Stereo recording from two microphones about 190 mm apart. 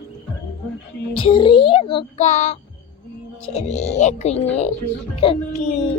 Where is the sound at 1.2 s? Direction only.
25° left (ahead or behind).